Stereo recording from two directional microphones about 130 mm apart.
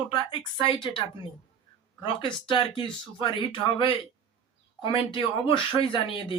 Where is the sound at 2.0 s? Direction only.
35° left (ahead or behind).